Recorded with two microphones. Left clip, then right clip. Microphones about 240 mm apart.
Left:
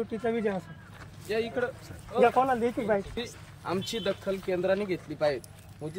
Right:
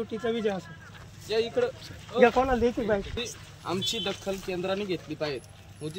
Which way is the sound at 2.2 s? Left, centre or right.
Left.